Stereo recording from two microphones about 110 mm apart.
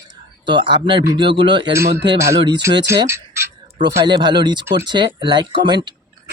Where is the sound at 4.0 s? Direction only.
45° right (ahead or behind).